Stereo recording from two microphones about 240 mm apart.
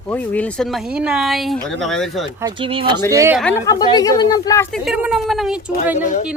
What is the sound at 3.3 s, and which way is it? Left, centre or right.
Speech, centre.